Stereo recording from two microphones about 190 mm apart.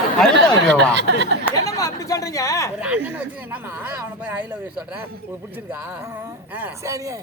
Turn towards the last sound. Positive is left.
turn(degrees=-15)  # may be behind; listen again after turning